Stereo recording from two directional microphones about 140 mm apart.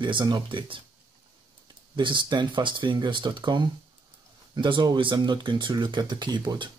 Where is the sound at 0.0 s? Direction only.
35° right (ahead or behind).